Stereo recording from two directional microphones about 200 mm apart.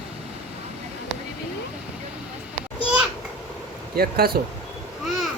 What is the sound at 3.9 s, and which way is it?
Speech, 50° right (ahead or behind).